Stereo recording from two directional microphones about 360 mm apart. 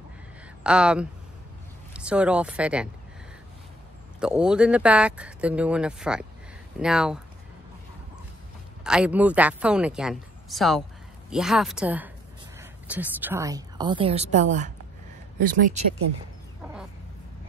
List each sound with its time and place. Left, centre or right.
0.7 s speech: centre
4.2 s speech: centre
8.8 s a woman's voice: centre; by 15.8 s right